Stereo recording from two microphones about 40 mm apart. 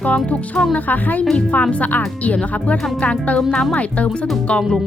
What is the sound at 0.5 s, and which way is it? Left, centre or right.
Speech, left.